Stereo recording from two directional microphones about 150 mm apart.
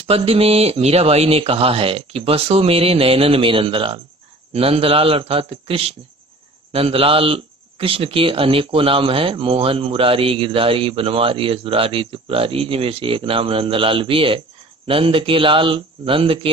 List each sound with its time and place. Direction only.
0.0 s a man's voice: 40° right (ahead or behind)